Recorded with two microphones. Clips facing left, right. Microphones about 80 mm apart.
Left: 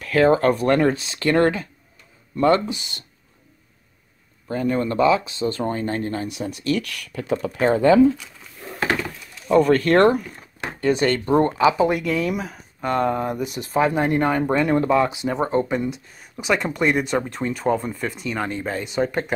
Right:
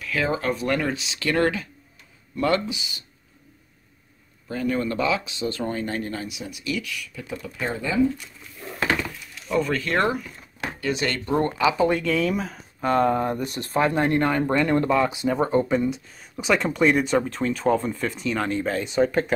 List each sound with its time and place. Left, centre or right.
0.0 s speech: left
2.6 s speech: left
4.5 s speech: left
6.3 s speech: left
9.0 s speech: left
10.6 s a sound: left
11.2 s speech: left; by 19.3 s centre